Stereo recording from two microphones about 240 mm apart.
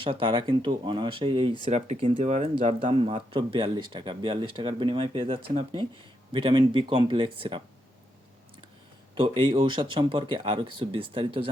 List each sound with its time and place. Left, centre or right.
0.0 s speech: right
9.1 s speech: right